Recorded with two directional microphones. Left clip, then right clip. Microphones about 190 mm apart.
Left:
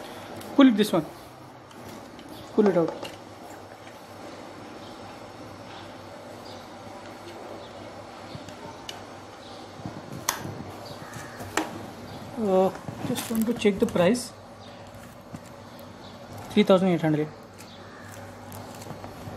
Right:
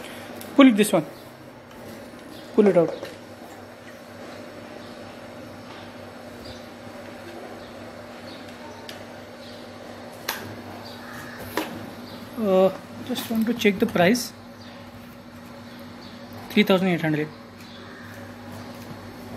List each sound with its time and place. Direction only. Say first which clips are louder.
0.6 s speech: right 3 dB; centre (ahead or behind)
2.5 s speech: right 4 dB; centre (ahead or behind)
12.4 s speech: right 4 dB; 5° left (ahead or behind)
16.5 s speech: even; 25° left (ahead or behind)